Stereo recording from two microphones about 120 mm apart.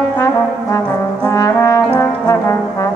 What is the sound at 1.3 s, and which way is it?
Brass instrument, 25° left (ahead or behind).